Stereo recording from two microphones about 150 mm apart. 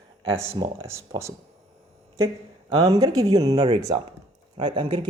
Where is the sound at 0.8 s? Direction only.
20° right (ahead or behind).